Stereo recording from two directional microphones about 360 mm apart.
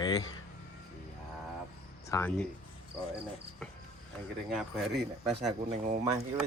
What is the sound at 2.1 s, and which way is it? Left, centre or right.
Speech, centre.